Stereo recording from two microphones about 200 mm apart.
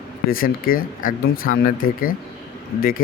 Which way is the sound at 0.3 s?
45° left (ahead or behind).